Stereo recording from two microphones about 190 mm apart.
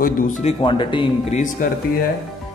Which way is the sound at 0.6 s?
25° left (ahead or behind).